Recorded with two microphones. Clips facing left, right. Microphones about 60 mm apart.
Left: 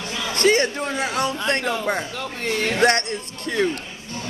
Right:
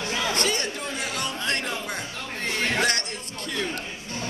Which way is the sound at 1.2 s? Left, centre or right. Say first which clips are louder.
Left 5 dB; left.